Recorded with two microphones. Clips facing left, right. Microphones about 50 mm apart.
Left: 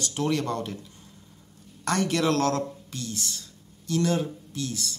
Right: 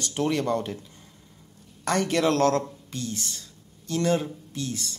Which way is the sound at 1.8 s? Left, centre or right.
Centre.